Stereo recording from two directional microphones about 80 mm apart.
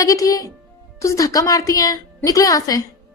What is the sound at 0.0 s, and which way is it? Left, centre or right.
A woman's voice, left.